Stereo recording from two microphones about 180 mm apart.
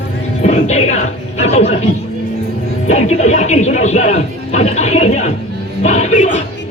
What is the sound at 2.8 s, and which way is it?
Speech, 40° left (ahead or behind).